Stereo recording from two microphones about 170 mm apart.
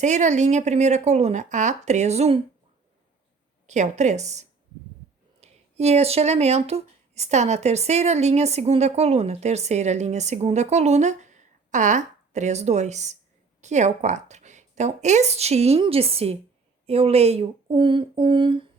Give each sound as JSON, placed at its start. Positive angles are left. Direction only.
{"t": 0.0, "sound": "speech", "side_deg": -45}
{"t": 3.7, "sound": "speech", "side_deg": -45}